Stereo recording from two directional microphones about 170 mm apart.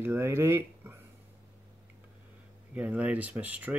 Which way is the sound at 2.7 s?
10° right (ahead or behind).